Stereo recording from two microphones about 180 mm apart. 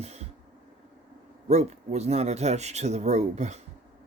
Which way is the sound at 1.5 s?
40° right (ahead or behind).